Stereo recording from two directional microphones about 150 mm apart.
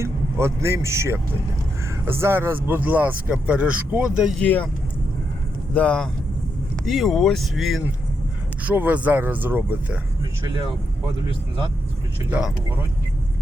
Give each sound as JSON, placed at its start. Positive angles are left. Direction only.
{"t": 0.0, "sound": "speech", "side_deg": -20}
{"t": 4.4, "sound": "speech", "side_deg": 10}
{"t": 5.7, "sound": "speech", "side_deg": 5}
{"t": 8.6, "sound": "speech", "side_deg": -10}
{"t": 12.3, "sound": "speech", "side_deg": -5}